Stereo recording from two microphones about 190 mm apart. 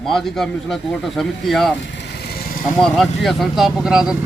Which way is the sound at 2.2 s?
55° left (ahead or behind).